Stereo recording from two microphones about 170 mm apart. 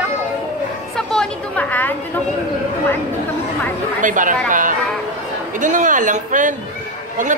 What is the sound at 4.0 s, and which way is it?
Speech, 50° right (ahead or behind).